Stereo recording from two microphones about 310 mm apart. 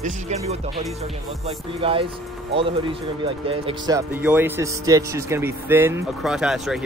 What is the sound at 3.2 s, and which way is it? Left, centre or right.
Speech, centre.